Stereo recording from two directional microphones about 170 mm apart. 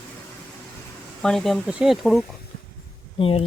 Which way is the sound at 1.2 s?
Centre (ahead or behind).